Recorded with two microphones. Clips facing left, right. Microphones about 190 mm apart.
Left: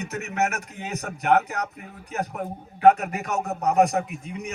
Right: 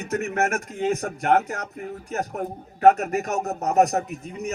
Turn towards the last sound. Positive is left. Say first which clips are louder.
# right 1 dB
turn(degrees=-40)  # may be behind; listen again after turning